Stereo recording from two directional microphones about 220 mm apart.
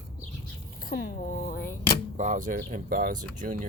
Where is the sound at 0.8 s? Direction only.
40° left (ahead or behind).